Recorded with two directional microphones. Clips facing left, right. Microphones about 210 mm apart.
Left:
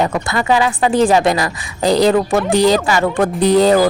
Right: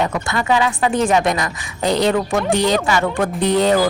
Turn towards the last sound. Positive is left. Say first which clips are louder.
# left 4 dB
turn(degrees=35)  # may be behind; listen again after turning